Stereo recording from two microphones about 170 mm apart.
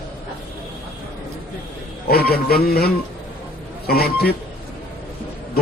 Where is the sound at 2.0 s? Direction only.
65° left (ahead or behind).